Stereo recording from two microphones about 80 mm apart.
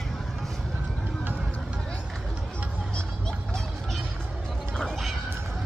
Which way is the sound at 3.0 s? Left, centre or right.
Centre.